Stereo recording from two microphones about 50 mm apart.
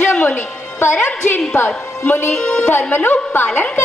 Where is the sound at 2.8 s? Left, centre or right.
Left.